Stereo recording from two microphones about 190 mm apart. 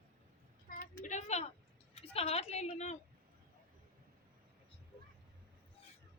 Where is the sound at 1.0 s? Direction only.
35° left (ahead or behind).